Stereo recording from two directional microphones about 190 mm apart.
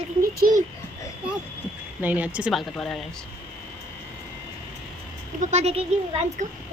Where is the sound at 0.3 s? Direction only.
50° right (ahead or behind).